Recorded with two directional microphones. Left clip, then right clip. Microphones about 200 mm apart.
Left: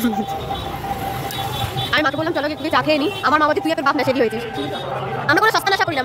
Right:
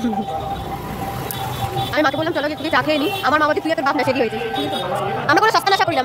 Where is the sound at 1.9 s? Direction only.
5° right (ahead or behind).